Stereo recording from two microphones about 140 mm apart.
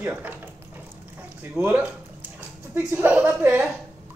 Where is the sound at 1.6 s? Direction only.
15° right (ahead or behind).